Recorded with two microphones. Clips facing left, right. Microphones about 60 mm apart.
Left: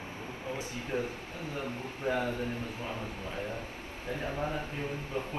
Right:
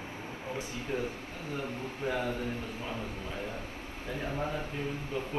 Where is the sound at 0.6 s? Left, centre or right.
Left.